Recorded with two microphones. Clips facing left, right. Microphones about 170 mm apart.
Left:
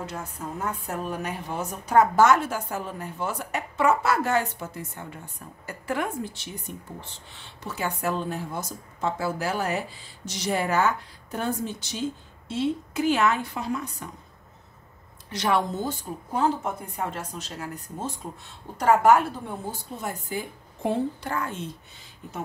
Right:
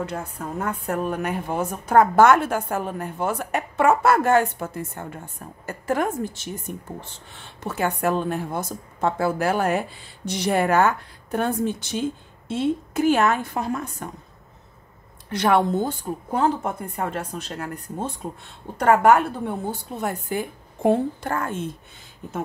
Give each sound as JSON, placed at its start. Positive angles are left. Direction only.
{"t": 0.0, "sound": "a woman's voice", "side_deg": -60}
{"t": 15.2, "sound": "a woman's voice", "side_deg": -55}